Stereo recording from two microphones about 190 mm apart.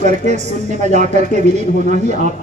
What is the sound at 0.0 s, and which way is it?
Speech, 40° right (ahead or behind).